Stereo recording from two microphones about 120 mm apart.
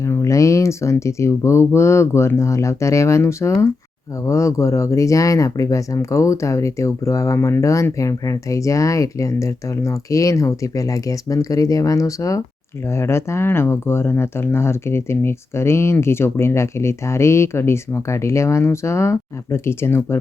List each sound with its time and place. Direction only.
0.0 s speech: 25° left (ahead or behind)